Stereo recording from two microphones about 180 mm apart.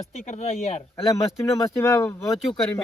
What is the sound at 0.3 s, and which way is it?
Speech, 35° left (ahead or behind).